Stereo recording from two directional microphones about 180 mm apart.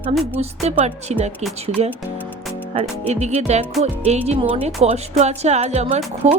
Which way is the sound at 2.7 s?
35° right (ahead or behind).